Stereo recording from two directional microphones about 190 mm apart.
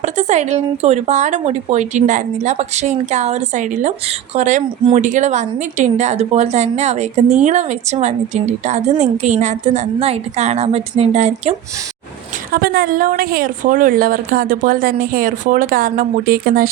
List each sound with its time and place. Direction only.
0.0 s speech: 35° right (ahead or behind)
12.5 s a woman's voice: 50° right (ahead or behind)